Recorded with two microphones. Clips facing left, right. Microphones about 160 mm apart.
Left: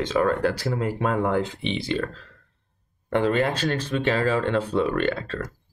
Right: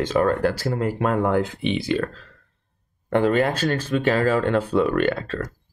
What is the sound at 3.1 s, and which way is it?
Speech, 50° right (ahead or behind).